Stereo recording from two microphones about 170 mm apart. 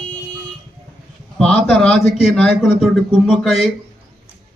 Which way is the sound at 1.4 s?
5° left (ahead or behind).